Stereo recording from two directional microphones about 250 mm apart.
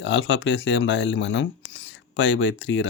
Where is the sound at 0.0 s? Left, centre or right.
Left.